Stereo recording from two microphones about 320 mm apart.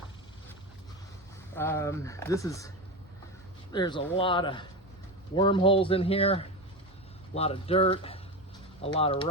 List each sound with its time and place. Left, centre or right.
1.5 s speech: centre